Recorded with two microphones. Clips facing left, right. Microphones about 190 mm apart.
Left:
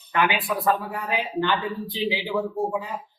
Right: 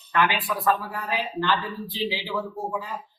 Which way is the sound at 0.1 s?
20° left (ahead or behind).